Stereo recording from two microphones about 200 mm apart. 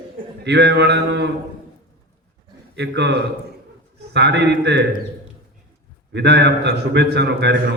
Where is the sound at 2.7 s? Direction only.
55° right (ahead or behind).